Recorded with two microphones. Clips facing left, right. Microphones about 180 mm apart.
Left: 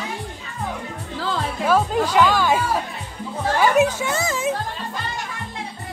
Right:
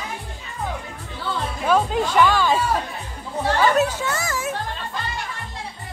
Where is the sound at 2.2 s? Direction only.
10° left (ahead or behind).